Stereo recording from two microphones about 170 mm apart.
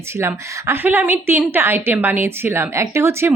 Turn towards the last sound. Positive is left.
turn(degrees=-15)  # may be behind; listen again after turning